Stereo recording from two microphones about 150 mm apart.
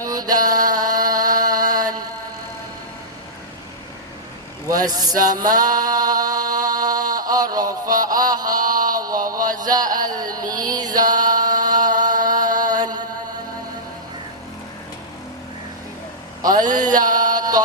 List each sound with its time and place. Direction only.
0.0 s mantra: 25° right (ahead or behind)
4.7 s music: 25° right (ahead or behind)
8.1 s mantra: 25° right (ahead or behind)
8.8 s chant: 25° right (ahead or behind)
10.2 s music: 25° right (ahead or behind)
16.6 s a sound: 25° right (ahead or behind)